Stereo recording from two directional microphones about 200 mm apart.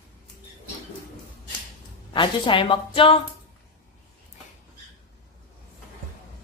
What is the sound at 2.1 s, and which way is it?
A woman's voice, 25° left (ahead or behind).